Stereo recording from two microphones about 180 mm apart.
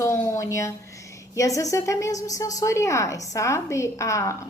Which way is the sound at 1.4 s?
20° left (ahead or behind).